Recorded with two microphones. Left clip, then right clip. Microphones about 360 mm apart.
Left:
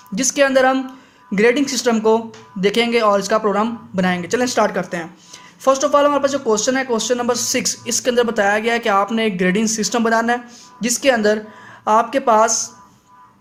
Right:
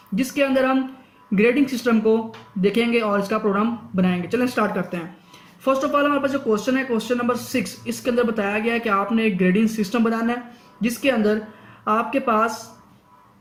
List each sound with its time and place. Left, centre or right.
0.2 s speech: centre